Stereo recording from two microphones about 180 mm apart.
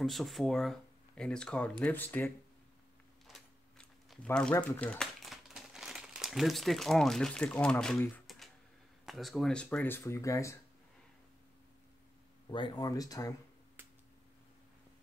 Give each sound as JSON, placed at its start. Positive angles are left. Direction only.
{"t": 0.0, "sound": "speech", "side_deg": 0}
{"t": 3.3, "sound": "a sound", "side_deg": 0}
{"t": 9.0, "sound": "speech", "side_deg": 0}
{"t": 12.4, "sound": "speech", "side_deg": 25}